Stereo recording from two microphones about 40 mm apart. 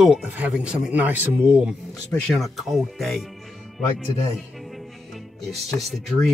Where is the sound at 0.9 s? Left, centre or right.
Right.